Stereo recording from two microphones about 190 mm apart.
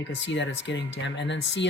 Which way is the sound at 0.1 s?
70° left (ahead or behind).